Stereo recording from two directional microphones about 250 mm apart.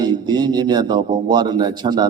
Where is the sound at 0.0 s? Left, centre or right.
Centre.